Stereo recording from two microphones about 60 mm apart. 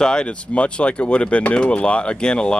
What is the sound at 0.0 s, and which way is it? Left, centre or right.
Speech, centre.